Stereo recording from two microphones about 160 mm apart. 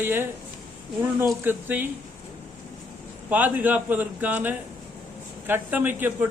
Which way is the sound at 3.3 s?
10° right (ahead or behind).